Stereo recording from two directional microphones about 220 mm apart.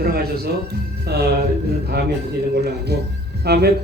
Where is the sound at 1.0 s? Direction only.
45° right (ahead or behind).